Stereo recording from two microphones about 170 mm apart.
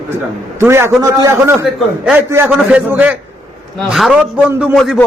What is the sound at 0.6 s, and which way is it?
A man's voice, 15° right (ahead or behind).